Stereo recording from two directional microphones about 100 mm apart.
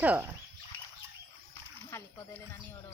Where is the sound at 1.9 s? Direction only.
25° left (ahead or behind).